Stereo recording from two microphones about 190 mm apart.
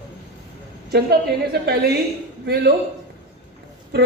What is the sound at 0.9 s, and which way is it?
A woman's voice, 55° right (ahead or behind).